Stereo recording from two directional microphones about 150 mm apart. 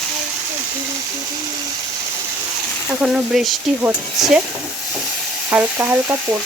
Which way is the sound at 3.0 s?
5° right (ahead or behind).